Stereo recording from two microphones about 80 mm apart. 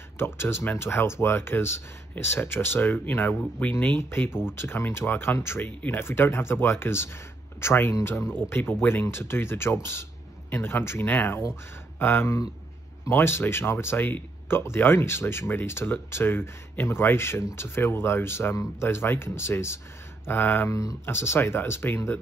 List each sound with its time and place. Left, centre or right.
0.2 s speech: left
20.7 s speech: left
21.0 s speech: left